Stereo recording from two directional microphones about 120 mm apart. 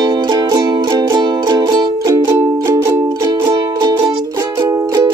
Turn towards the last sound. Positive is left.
turn(degrees=-30)  # may be behind; listen again after turning